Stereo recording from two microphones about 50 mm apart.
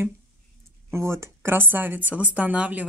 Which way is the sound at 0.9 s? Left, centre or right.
Right.